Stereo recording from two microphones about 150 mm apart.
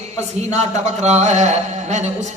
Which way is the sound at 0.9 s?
50° right (ahead or behind).